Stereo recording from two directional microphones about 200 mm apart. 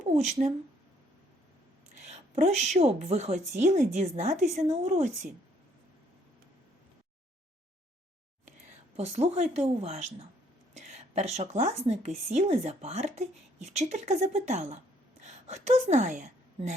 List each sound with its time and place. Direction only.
0.0 s speech: 35° right (ahead or behind)
2.0 s a woman's voice: 35° right (ahead or behind)
9.0 s a woman's voice: 30° right (ahead or behind)